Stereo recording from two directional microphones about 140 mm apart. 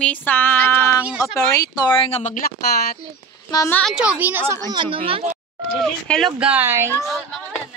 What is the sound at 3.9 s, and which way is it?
Speech, 5° right (ahead or behind).